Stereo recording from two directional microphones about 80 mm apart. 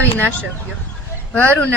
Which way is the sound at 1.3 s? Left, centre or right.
Centre.